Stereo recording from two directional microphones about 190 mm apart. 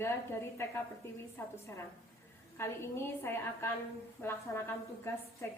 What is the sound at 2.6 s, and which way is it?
A woman's voice, 15° left (ahead or behind).